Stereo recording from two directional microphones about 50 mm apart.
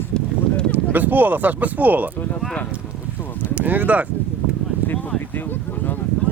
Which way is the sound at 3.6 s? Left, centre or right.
Right.